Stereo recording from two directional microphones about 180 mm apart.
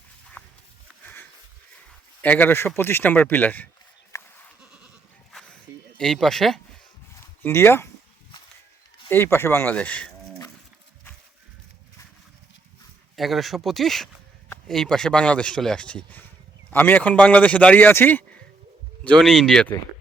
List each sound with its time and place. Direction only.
0.4 s a sound: 5° left (ahead or behind)
1.0 s sniff: 10° left (ahead or behind)
2.2 s speech: 10° left (ahead or behind)
4.1 s goat: 15° left (ahead or behind)
5.3 s music: 5° left (ahead or behind)
6.0 s speech: 5° left (ahead or behind)
7.4 s speech: 15° left (ahead or behind)
9.0 s speech: 10° left (ahead or behind)
13.1 s speech: centre (ahead or behind)